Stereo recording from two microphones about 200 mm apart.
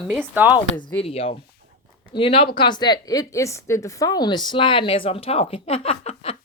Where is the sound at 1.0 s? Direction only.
30° left (ahead or behind).